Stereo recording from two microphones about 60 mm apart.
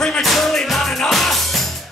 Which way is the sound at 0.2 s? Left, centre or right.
Centre.